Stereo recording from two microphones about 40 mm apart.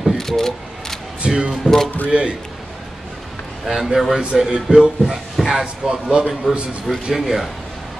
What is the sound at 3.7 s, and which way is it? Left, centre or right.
Speech, centre.